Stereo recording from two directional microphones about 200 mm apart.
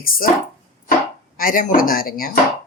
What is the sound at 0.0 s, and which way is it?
Speech, 45° left (ahead or behind).